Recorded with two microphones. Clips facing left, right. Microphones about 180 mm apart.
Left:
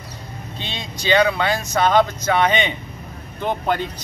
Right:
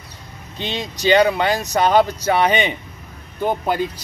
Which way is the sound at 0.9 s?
40° right (ahead or behind).